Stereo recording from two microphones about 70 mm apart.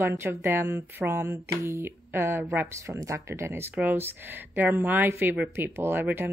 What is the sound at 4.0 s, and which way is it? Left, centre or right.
Speech, right.